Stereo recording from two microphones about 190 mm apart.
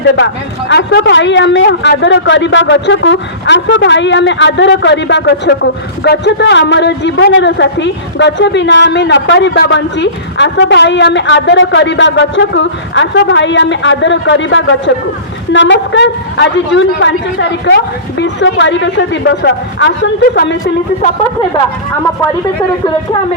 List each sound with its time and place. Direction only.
0.7 s a man's voice: 70° left (ahead or behind)